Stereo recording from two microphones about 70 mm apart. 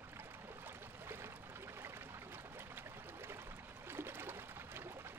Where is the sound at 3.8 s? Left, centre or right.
Right.